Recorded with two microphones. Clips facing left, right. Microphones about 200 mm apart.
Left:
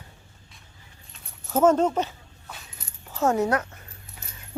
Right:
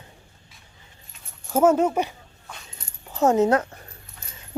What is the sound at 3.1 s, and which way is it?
Speech, 20° right (ahead or behind).